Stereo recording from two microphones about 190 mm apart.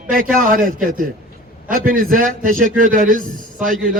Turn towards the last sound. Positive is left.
turn(degrees=-45)  # may be behind; listen again after turning